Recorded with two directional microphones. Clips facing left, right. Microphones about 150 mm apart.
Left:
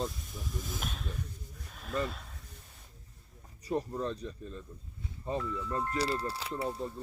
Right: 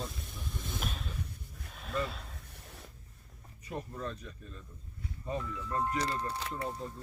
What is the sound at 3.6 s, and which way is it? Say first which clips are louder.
Speech: left 6 dB; 35° left (ahead or behind).